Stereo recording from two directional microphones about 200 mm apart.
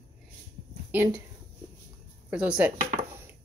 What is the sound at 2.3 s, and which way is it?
Speech, 5° right (ahead or behind).